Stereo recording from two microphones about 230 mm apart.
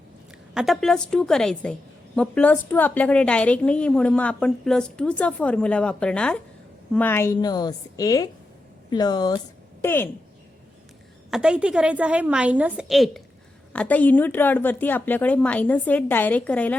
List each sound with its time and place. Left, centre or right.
0.5 s a woman's voice: centre
11.3 s a woman's voice: centre